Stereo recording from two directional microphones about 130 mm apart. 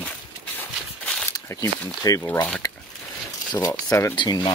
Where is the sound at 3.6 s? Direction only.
25° left (ahead or behind).